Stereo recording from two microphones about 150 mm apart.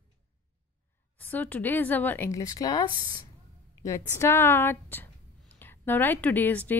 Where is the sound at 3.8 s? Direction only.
20° left (ahead or behind).